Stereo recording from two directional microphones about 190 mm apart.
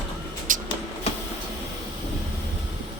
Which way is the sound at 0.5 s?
45° right (ahead or behind).